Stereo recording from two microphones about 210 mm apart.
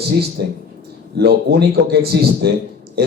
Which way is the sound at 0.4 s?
50° right (ahead or behind).